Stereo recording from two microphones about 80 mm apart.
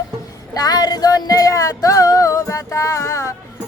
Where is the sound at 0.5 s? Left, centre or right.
Left.